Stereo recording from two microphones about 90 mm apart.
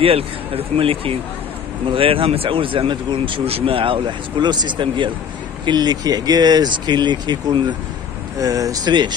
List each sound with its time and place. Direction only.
0.0 s speech: 90° right; by 5.1 s 65° right (ahead or behind)
5.7 s speech: 50° right (ahead or behind)
8.4 s speech: 40° right (ahead or behind)